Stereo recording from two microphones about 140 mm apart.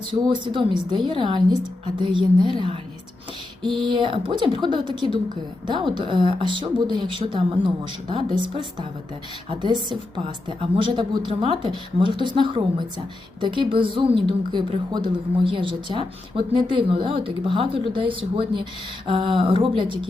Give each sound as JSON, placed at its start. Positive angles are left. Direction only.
{"t": 0.1, "sound": "a woman's voice", "side_deg": -40}
{"t": 3.8, "sound": "a woman's voice", "side_deg": -35}